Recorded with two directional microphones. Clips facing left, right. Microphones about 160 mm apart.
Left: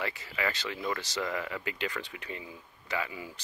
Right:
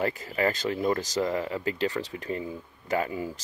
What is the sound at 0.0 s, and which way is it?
Speech, 45° right (ahead or behind).